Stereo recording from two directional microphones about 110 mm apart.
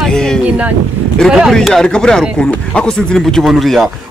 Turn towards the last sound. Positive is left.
turn(degrees=0)  # may be behind; listen again after turning